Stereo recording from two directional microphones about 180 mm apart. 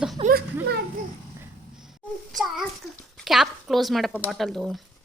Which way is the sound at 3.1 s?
Centre (ahead or behind).